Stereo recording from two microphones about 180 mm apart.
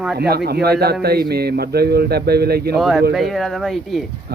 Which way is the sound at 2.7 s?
Centre (ahead or behind).